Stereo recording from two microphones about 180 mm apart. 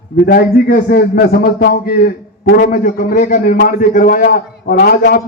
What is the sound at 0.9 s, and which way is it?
A man's voice, 55° left (ahead or behind).